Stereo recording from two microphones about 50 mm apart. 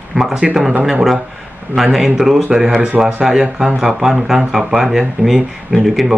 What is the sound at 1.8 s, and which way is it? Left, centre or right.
Speech, centre.